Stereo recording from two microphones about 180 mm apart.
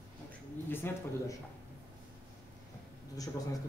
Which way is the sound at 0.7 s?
10° left (ahead or behind).